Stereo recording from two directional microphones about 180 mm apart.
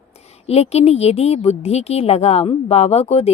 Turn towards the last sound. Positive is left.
turn(degrees=35)  # may be behind; listen again after turning